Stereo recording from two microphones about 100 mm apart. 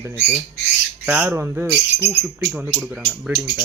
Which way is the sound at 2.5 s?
15° right (ahead or behind).